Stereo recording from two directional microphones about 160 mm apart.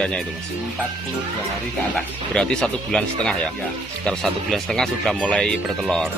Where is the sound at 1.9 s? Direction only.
5° left (ahead or behind).